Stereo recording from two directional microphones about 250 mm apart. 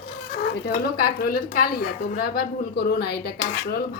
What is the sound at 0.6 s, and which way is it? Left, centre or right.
A woman's voice, left.